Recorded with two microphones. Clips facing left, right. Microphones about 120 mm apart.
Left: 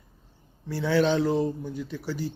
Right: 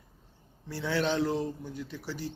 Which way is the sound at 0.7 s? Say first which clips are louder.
Left 6 dB; centre (ahead or behind).